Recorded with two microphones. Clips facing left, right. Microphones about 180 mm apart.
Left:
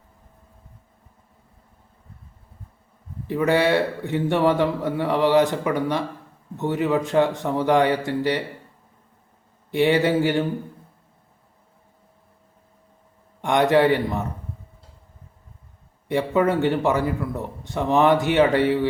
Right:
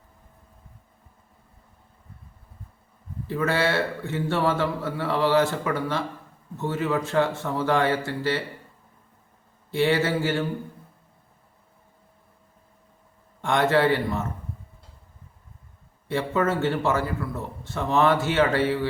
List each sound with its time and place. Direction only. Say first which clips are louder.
3.2 s a man's voice: left 5 dB; 15° left (ahead or behind)
9.7 s a man's voice: left 4 dB; 15° left (ahead or behind)
13.4 s a man's voice: left 3 dB; 15° left (ahead or behind)
16.0 s a man's voice: left 4 dB; 15° left (ahead or behind)